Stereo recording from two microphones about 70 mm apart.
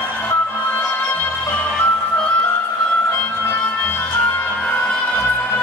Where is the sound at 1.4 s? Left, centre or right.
Left.